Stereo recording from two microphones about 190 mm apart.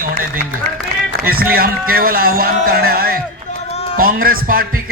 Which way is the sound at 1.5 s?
50° right (ahead or behind).